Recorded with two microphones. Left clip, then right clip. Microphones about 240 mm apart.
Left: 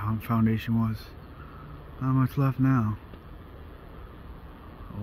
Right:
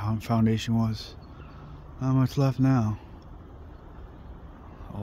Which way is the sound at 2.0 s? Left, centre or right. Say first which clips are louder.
Right 1 dB; centre.